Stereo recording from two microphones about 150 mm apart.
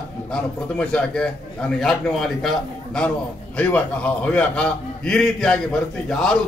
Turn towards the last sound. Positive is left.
turn(degrees=5)  # may be behind; listen again after turning